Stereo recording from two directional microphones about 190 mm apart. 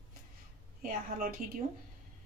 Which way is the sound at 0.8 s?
50° right (ahead or behind).